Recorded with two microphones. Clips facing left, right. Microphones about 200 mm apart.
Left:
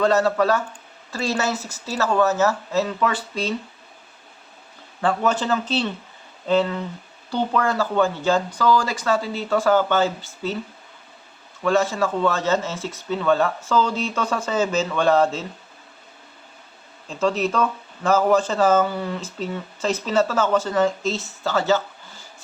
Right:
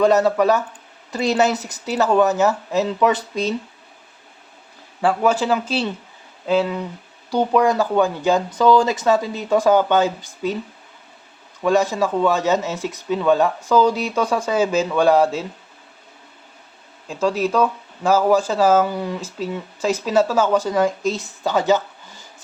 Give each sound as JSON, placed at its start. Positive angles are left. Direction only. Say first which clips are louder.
{"t": 0.0, "sound": "speech", "louder": "right 3 dB", "side_deg": -15}
{"t": 4.9, "sound": "speech", "louder": "right 3 dB", "side_deg": -10}
{"t": 11.6, "sound": "speech", "louder": "right 2 dB", "side_deg": -15}
{"t": 17.1, "sound": "speech", "louder": "right 2 dB", "side_deg": -10}